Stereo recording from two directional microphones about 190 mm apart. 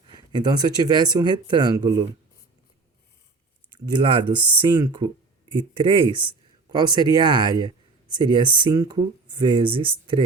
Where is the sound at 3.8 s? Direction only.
25° right (ahead or behind).